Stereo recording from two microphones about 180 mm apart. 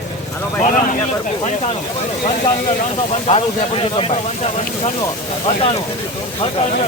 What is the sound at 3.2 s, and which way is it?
Speech, 30° left (ahead or behind).